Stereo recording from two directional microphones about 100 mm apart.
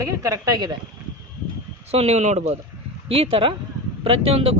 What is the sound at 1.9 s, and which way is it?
Speech, 90° right.